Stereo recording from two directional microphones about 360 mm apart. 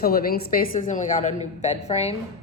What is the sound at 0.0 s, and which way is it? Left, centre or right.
A woman's voice, left.